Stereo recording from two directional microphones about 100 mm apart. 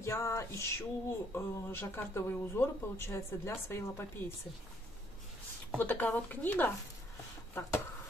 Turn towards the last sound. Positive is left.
turn(degrees=25)  # may be behind; listen again after turning